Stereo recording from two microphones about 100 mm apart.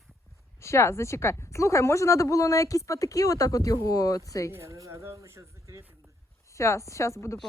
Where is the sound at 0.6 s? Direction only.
30° left (ahead or behind).